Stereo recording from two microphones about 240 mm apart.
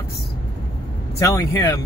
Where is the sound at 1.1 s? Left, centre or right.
Centre.